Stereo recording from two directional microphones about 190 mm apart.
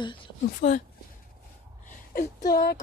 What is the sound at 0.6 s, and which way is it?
Speech, 40° left (ahead or behind).